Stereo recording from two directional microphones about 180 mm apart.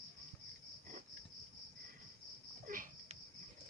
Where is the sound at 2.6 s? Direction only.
50° right (ahead or behind).